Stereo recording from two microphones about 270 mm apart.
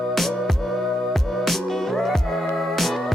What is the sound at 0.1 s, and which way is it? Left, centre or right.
Music, centre.